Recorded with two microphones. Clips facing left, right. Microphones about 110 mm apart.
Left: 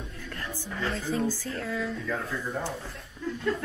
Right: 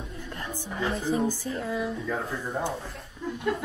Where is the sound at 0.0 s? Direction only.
15° right (ahead or behind).